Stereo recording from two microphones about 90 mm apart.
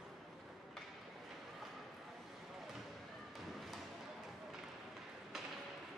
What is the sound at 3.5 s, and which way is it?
Music, centre (ahead or behind).